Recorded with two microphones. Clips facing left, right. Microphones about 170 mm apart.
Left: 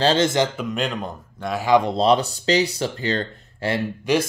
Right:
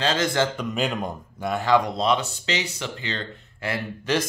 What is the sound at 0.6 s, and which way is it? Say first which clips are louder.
Speech: left 1 dB; centre (ahead or behind).